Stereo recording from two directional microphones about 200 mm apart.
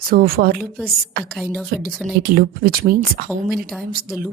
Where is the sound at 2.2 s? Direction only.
50° right (ahead or behind).